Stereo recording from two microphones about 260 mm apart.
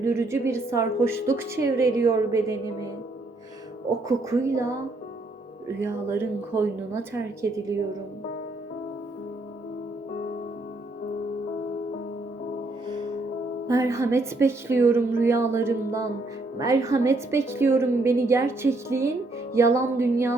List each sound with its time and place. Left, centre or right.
0.0 s a woman's voice: centre
4.1 s a woman's voice: centre
13.7 s a woman's voice: centre